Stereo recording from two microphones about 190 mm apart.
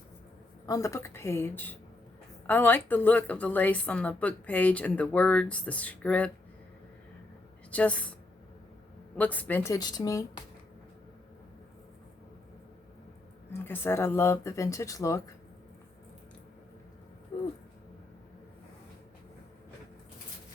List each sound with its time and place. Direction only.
0.6 s a woman's voice: 15° left (ahead or behind)
7.7 s a woman's voice: 5° left (ahead or behind)
9.1 s a woman's voice: 10° left (ahead or behind)
13.5 s a woman's voice: 10° left (ahead or behind)